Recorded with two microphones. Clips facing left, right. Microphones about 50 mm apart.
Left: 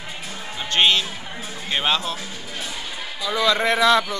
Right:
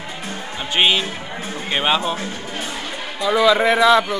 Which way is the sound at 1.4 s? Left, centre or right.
Right.